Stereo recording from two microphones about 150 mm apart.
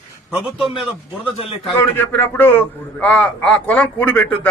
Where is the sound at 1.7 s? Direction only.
15° left (ahead or behind).